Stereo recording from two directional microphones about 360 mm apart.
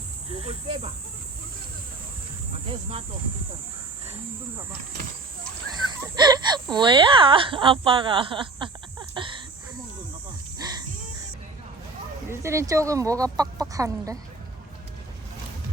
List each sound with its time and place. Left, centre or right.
0.4 s speech: centre
6.0 s wail: centre
6.7 s speech: centre
12.3 s speech: centre